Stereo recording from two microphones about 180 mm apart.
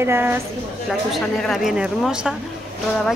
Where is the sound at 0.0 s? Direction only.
10° right (ahead or behind).